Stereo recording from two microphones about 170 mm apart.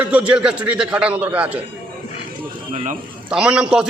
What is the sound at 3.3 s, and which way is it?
Speech, 5° right (ahead or behind).